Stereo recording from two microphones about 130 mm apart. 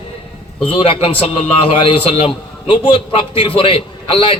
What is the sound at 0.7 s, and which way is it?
A man's voice, 45° left (ahead or behind).